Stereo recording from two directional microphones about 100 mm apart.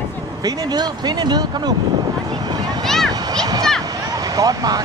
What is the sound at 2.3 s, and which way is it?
Vehicle, 45° right (ahead or behind).